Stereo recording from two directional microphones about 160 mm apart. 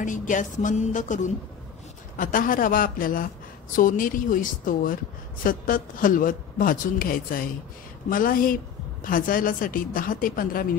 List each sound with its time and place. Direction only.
0.0 s a woman's voice: 55° left (ahead or behind)